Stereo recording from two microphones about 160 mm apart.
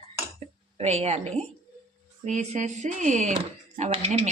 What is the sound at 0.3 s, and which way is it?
A woman's voice, 40° right (ahead or behind).